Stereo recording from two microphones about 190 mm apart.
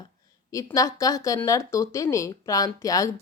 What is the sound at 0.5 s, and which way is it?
A woman's voice, 15° left (ahead or behind).